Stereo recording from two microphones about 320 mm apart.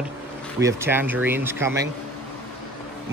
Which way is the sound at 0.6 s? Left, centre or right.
Centre.